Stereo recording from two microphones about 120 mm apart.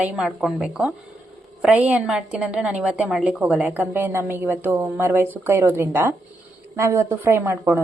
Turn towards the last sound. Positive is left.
turn(degrees=-25)  # may be behind; listen again after turning